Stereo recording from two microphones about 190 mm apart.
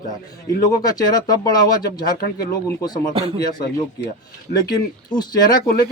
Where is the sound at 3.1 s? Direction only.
30° right (ahead or behind).